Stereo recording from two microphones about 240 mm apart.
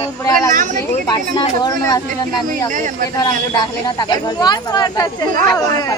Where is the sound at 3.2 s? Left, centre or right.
Centre.